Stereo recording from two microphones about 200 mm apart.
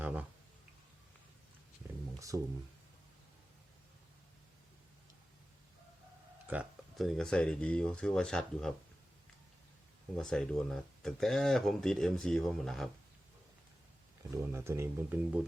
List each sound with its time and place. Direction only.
0.0 s a sound: 10° right (ahead or behind)
2.1 s speech: 15° right (ahead or behind)
6.5 s speech: 5° right (ahead or behind)
10.2 s speech: 5° left (ahead or behind)
14.4 s speech: 15° right (ahead or behind)